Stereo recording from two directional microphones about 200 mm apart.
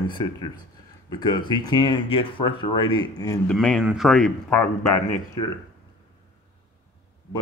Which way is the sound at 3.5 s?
Centre (ahead or behind).